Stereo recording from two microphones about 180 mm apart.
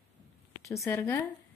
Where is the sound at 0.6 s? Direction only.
15° left (ahead or behind).